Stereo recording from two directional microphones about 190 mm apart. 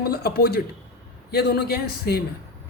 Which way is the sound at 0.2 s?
55° left (ahead or behind).